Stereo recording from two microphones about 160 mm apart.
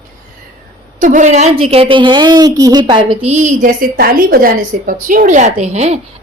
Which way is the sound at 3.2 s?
45° right (ahead or behind).